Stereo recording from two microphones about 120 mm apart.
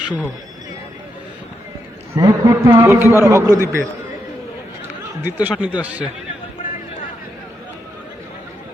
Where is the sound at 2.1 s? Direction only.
25° right (ahead or behind).